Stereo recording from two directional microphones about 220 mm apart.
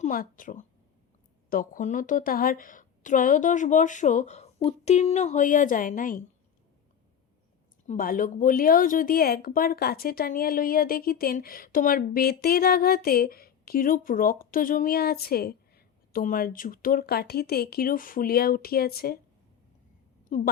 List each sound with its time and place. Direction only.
0.0 s a woman's voice: 40° left (ahead or behind)
7.9 s a woman's voice: 40° left (ahead or behind)
20.3 s a woman's voice: 35° left (ahead or behind)